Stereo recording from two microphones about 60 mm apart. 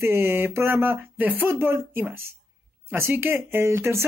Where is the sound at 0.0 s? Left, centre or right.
Right.